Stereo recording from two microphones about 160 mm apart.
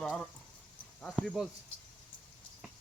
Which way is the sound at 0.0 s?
5° left (ahead or behind).